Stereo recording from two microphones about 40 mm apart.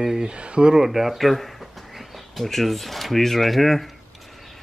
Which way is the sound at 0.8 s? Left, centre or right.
Centre.